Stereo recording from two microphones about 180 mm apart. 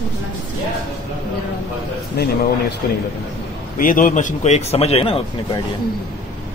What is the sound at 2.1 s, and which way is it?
Speech, 55° left (ahead or behind).